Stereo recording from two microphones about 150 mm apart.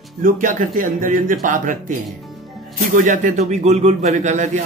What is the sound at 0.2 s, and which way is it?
A man's voice, 65° right (ahead or behind).